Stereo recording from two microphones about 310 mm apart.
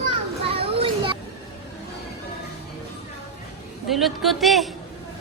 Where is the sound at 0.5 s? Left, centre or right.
Centre.